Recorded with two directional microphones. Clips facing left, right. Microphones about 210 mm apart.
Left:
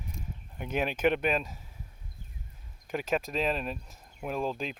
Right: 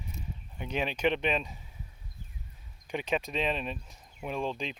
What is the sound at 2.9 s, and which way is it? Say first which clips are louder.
Speech: left 1 dB; centre (ahead or behind).